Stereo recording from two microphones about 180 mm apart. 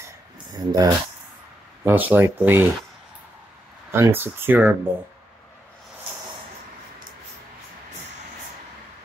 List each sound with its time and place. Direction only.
0.0 s a sound: 20° right (ahead or behind)
1.9 s speech: 10° right (ahead or behind)
3.9 s speech: 10° right (ahead or behind)